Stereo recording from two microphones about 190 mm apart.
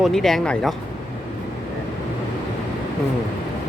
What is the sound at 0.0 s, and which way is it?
Speech, centre (ahead or behind).